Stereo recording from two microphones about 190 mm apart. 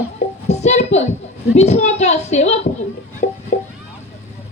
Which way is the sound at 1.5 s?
35° left (ahead or behind).